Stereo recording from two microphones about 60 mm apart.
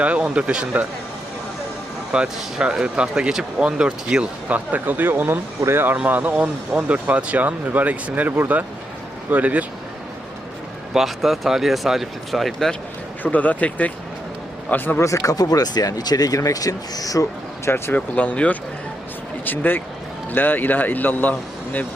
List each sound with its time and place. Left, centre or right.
0.0 s speech: right
2.1 s speech: centre; by 6.3 s right
6.3 s speech: centre
10.9 s speech: centre
13.2 s speech: left
14.9 s speech: left
17.9 s speech: left
19.5 s speech: left